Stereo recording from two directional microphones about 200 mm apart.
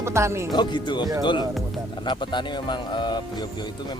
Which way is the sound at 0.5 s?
20° left (ahead or behind).